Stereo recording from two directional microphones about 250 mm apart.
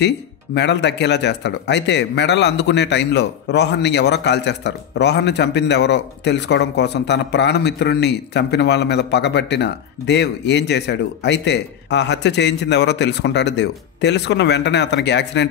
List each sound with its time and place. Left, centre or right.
0.6 s speech: left